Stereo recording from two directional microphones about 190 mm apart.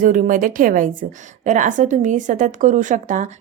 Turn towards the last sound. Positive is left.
turn(degrees=-40)  # may be behind; listen again after turning